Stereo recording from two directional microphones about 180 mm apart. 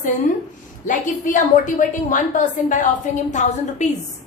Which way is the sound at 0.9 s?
45° left (ahead or behind).